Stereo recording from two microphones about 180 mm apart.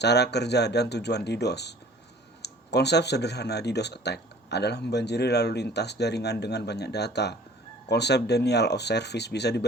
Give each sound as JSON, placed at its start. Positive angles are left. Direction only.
{"t": 0.0, "sound": "speech", "side_deg": 70}